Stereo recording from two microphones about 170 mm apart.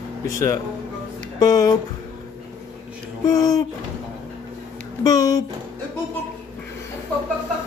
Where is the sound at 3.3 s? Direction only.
20° left (ahead or behind).